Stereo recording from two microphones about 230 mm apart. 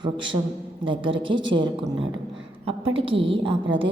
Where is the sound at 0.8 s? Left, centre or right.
Right.